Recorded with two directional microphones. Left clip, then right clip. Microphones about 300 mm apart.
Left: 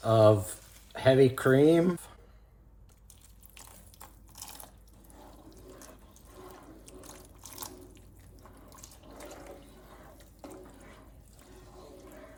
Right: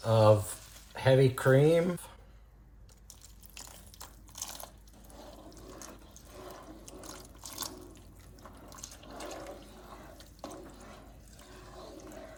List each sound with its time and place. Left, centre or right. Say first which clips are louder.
0.0 s speech: left 2 dB; centre
4.4 s biting: right 4 dB; centre
6.5 s water: right 2 dB; centre
8.7 s water: right 5 dB; centre